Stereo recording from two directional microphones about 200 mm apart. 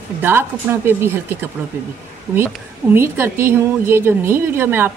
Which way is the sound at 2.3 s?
Centre (ahead or behind).